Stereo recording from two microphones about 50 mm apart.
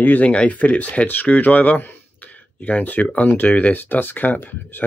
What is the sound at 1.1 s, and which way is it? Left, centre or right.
Speech, left.